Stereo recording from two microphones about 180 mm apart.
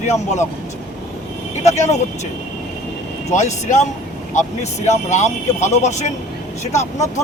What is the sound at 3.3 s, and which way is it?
Speech, 40° left (ahead or behind).